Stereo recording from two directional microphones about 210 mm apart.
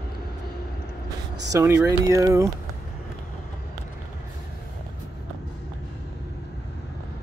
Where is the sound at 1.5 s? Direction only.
15° right (ahead or behind).